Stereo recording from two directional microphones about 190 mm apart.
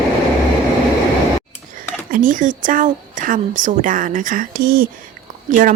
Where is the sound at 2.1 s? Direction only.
45° right (ahead or behind).